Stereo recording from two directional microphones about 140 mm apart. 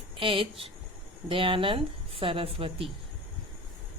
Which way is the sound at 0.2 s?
40° right (ahead or behind).